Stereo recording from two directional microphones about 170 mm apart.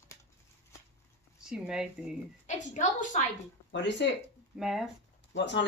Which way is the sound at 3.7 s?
90° left.